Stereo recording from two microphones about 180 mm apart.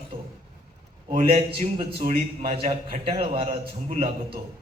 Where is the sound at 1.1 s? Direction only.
30° right (ahead or behind).